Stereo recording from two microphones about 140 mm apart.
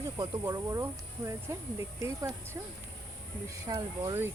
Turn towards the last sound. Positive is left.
turn(degrees=-25)  # may be behind; listen again after turning